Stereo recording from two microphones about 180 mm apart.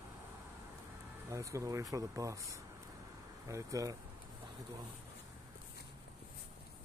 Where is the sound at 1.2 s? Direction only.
15° right (ahead or behind).